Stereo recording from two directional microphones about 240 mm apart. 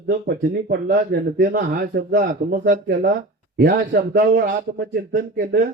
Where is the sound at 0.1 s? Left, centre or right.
Right.